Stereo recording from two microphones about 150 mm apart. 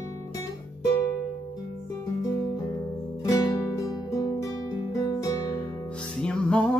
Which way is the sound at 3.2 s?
25° left (ahead or behind).